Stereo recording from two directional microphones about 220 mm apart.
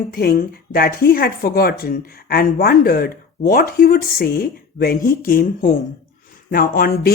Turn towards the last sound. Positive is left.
turn(degrees=45)  # may be behind; listen again after turning